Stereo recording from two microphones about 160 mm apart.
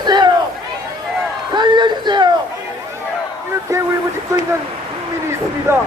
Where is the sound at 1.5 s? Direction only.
25° right (ahead or behind).